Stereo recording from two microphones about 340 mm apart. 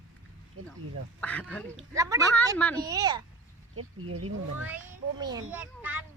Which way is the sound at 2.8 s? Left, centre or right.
Centre.